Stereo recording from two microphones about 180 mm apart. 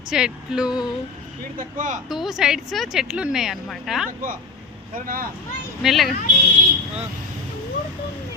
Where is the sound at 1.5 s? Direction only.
45° right (ahead or behind).